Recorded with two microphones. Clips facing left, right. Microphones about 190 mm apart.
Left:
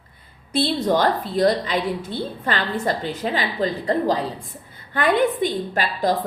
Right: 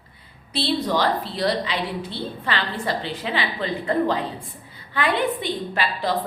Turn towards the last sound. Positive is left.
turn(degrees=45)  # may be behind; listen again after turning